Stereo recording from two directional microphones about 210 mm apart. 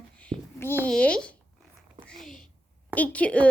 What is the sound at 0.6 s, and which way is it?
Speech, 10° left (ahead or behind).